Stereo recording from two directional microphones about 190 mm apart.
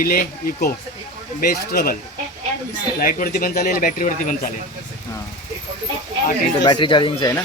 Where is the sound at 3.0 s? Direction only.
50° left (ahead or behind).